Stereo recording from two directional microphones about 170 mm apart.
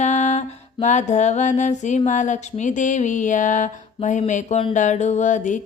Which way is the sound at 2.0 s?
45° left (ahead or behind).